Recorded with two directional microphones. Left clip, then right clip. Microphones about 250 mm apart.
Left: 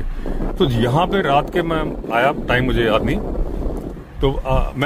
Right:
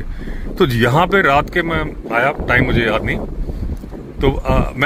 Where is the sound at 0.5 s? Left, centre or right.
Centre.